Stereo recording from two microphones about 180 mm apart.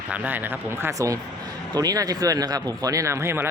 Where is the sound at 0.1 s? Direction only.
10° right (ahead or behind).